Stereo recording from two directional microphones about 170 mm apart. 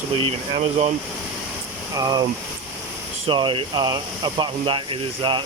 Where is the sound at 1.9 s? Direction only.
20° right (ahead or behind).